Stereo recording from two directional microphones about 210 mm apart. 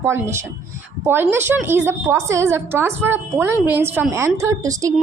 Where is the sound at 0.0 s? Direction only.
10° right (ahead or behind).